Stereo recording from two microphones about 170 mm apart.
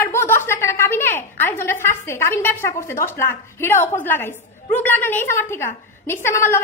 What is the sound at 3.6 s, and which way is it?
A woman's voice, 15° left (ahead or behind).